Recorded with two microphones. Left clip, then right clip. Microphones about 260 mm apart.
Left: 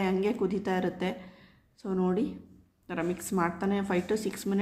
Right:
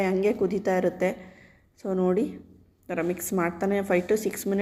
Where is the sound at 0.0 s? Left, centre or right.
Centre.